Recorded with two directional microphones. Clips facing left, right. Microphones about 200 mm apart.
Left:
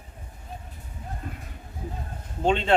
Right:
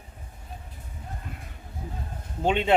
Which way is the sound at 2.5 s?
10° right (ahead or behind).